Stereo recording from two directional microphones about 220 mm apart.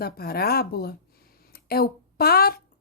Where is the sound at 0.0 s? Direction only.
45° left (ahead or behind).